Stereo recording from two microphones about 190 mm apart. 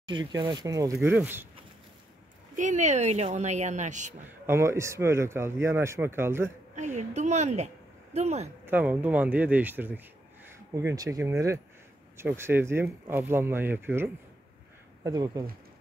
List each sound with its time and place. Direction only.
0.0 s speech: 25° right (ahead or behind)
2.5 s speech: 40° right (ahead or behind)
4.5 s speech: 15° right (ahead or behind)
6.7 s a woman's voice: 40° right (ahead or behind)
8.6 s speech: 10° right (ahead or behind)